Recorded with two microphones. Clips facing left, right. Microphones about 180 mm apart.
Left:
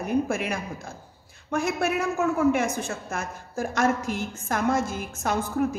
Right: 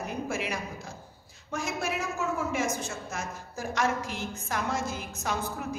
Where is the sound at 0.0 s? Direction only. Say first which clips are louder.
Left 7 dB; 50° left (ahead or behind).